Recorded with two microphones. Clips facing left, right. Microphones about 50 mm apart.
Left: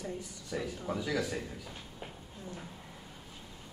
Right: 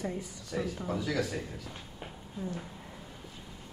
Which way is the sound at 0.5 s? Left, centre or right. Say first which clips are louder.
Right 2 dB; centre.